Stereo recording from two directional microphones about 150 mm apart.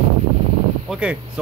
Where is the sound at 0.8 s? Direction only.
5° right (ahead or behind).